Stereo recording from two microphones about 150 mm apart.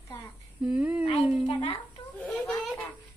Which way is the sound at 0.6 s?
10° right (ahead or behind).